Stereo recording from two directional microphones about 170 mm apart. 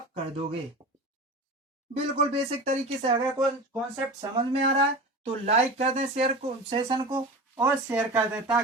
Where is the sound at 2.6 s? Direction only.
40° right (ahead or behind).